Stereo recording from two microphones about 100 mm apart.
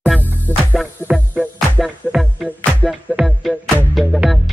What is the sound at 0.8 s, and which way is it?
Music, 5° right (ahead or behind).